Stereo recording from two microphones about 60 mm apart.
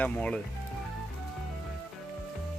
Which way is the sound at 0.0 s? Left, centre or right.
Left.